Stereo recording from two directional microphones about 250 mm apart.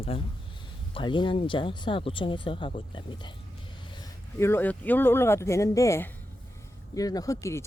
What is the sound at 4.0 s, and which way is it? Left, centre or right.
Speech, centre.